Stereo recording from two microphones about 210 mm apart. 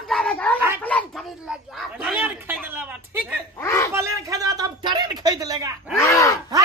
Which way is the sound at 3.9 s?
15° right (ahead or behind).